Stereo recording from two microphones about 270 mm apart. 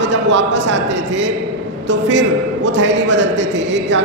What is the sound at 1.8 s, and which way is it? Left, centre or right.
A man's voice, right.